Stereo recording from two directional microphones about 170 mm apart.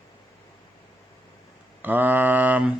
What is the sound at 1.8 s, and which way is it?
Mantra, 10° right (ahead or behind).